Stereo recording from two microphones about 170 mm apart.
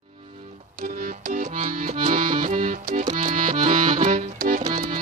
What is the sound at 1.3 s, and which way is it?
Accordion, 50° right (ahead or behind).